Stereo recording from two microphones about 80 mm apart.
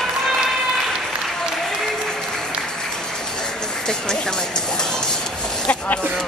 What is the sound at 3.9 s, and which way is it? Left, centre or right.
Music, centre.